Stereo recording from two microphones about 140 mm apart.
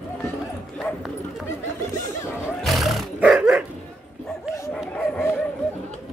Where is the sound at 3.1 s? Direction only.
5° right (ahead or behind).